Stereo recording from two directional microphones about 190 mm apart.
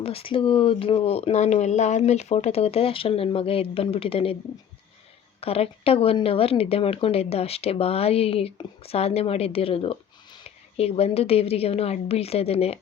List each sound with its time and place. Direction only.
0.0 s speech: 30° left (ahead or behind)
5.4 s speech: 30° left (ahead or behind)